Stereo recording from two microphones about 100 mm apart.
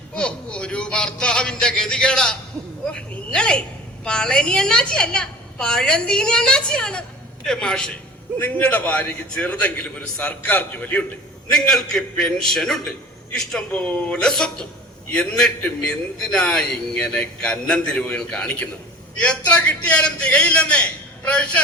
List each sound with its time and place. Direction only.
0.2 s a man's voice: 10° left (ahead or behind)
3.3 s a man's voice: 10° left (ahead or behind)
8.4 s a man's voice: 20° left (ahead or behind)
11.5 s a man's voice: 5° left (ahead or behind)